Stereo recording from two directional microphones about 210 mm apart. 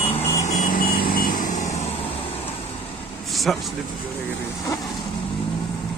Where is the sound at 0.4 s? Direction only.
40° left (ahead or behind).